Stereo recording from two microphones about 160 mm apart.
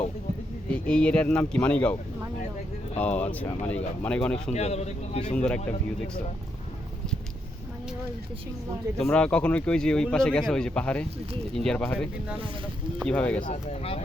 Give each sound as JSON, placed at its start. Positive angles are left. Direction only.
{"t": 0.7, "sound": "speech", "side_deg": 5}
{"t": 3.0, "sound": "speech", "side_deg": 10}
{"t": 4.5, "sound": "a man's voice", "side_deg": 40}
{"t": 5.2, "sound": "speech", "side_deg": 5}
{"t": 9.0, "sound": "speech", "side_deg": 5}
{"t": 13.4, "sound": "speech", "side_deg": 40}